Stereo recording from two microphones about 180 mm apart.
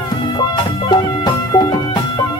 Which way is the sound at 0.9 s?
20° left (ahead or behind).